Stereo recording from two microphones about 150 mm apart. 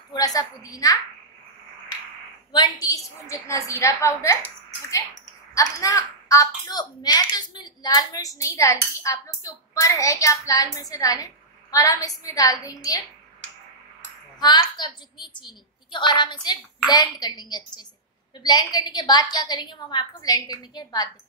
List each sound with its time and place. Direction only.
0.1 s a woman's voice: 25° left (ahead or behind)
2.5 s a woman's voice: 25° left (ahead or behind)
14.4 s a woman's voice: 30° left (ahead or behind)